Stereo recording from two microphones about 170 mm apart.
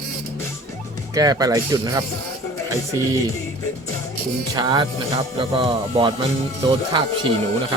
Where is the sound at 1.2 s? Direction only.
20° right (ahead or behind).